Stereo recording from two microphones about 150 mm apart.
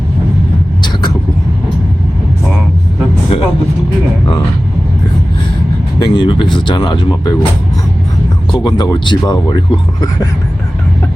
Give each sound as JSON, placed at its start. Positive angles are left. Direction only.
{"t": 6.0, "sound": "speech", "side_deg": 30}
{"t": 8.5, "sound": "speech", "side_deg": 30}